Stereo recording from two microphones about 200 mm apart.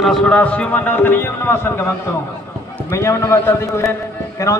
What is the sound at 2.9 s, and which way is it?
Speech, 15° left (ahead or behind).